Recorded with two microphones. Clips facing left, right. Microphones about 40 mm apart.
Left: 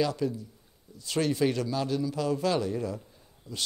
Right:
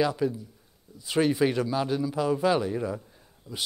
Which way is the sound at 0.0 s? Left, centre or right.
Centre.